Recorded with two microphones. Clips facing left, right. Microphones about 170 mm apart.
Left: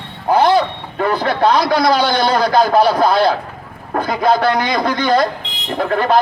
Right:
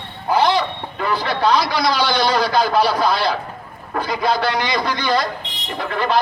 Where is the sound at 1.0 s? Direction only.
50° left (ahead or behind).